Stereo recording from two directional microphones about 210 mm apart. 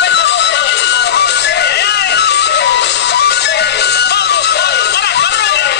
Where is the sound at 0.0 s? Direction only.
55° left (ahead or behind).